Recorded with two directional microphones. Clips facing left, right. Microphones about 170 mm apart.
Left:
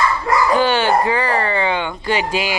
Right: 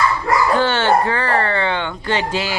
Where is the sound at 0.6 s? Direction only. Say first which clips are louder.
Even; 15° left (ahead or behind).